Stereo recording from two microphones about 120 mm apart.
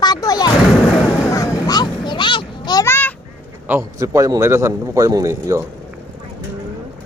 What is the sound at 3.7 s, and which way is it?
A man's voice, 25° right (ahead or behind).